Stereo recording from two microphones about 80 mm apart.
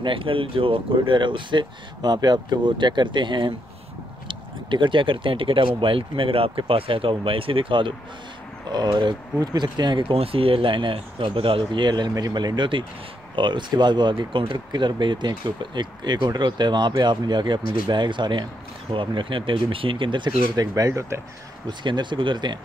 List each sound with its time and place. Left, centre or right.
0.0 s speech: right
8.6 s speech: right
10.6 s speech: right
13.4 s speech: right
20.5 s speech: right
21.6 s speech: right